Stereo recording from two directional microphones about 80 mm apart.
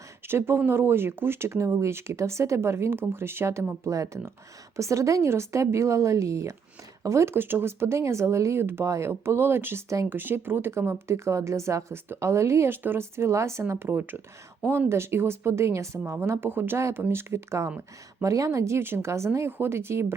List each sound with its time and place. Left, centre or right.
0.3 s speech: right